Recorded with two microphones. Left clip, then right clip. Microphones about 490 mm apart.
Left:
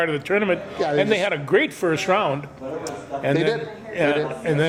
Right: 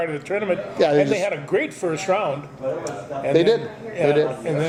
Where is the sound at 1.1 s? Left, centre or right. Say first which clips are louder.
Left 2 dB; left.